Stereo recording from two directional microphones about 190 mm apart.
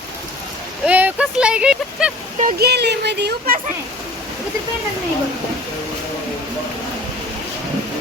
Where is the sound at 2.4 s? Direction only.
50° right (ahead or behind).